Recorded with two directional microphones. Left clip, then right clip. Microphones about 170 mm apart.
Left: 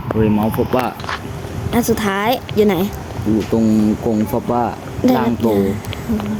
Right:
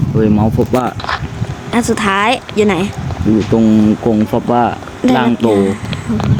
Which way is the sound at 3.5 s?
40° right (ahead or behind).